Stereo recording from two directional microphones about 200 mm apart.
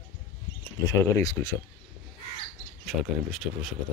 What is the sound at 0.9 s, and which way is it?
Speech, 15° left (ahead or behind).